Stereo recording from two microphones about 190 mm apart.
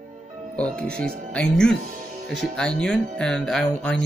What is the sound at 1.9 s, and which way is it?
Music, 45° right (ahead or behind).